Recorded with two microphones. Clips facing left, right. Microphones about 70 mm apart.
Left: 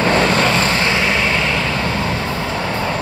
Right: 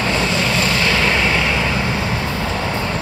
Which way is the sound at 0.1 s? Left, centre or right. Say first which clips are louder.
Left 4 dB; left.